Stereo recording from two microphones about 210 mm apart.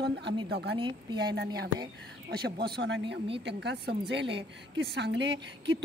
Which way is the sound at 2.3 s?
50° right (ahead or behind).